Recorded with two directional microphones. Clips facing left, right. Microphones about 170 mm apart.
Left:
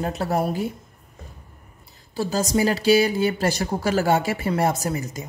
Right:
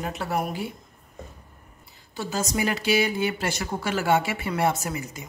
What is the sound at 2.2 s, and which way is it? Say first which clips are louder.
Speech: left 5 dB; 35° left (ahead or behind).